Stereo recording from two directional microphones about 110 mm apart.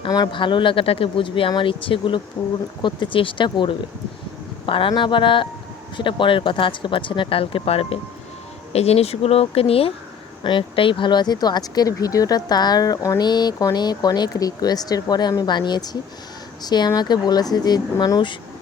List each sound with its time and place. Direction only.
0.1 s speech: 40° left (ahead or behind); by 7.9 s 60° left (ahead or behind)
8.7 s speech: 70° left (ahead or behind)
10.4 s speech: 50° left (ahead or behind); by 18.2 s 35° left (ahead or behind)